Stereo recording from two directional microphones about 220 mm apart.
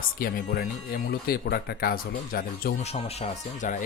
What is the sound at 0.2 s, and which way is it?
Speech, 40° left (ahead or behind).